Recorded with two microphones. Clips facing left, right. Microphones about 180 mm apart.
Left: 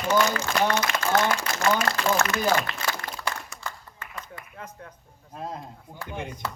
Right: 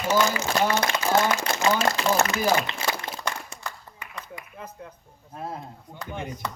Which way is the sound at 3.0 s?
25° right (ahead or behind).